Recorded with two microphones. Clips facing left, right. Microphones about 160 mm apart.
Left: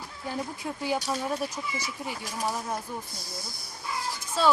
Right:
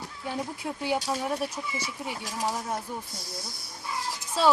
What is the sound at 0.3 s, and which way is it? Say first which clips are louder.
Speech: even; 5° right (ahead or behind).